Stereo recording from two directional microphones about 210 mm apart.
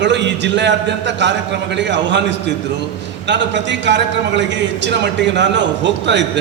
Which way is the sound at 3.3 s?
55° right (ahead or behind).